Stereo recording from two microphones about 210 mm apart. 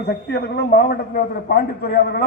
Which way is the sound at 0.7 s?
45° left (ahead or behind).